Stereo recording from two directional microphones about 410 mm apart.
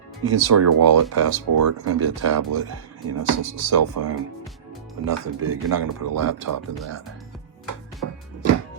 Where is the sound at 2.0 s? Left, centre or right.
Right.